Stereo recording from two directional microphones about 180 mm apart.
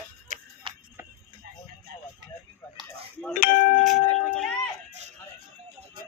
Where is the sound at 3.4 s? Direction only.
50° left (ahead or behind).